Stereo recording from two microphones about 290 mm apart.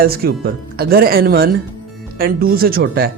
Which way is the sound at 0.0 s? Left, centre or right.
Right.